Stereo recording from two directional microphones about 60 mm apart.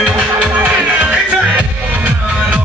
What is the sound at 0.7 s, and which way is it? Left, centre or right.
Music, centre.